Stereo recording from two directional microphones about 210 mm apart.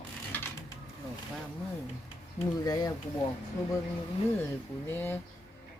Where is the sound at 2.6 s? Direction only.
20° left (ahead or behind).